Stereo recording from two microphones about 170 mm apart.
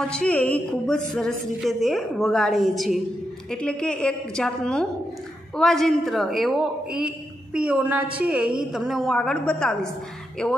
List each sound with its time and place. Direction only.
0.1 s a woman's voice: 5° left (ahead or behind)